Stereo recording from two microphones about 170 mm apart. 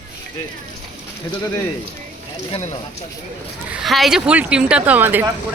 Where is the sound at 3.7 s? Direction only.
Centre (ahead or behind).